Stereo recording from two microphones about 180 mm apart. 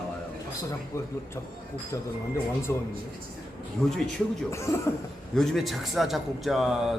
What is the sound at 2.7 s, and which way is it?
Speech, 15° left (ahead or behind).